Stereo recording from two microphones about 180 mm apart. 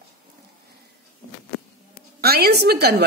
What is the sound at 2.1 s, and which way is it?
Speech, 60° right (ahead or behind).